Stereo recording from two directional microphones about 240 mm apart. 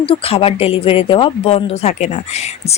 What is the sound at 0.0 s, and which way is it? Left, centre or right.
Speech, left.